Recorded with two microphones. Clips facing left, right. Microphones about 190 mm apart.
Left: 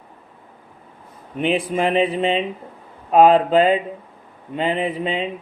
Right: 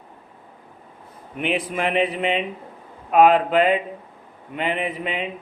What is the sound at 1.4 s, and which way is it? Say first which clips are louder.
Speech: left 4 dB; 30° left (ahead or behind).